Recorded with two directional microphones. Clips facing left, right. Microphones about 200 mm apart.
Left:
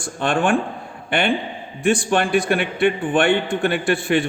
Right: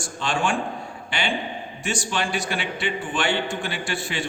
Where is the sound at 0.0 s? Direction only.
55° left (ahead or behind).